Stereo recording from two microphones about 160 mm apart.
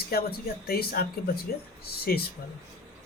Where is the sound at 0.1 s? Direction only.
70° left (ahead or behind).